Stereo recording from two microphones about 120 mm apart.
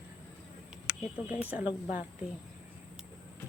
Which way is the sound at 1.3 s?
10° right (ahead or behind).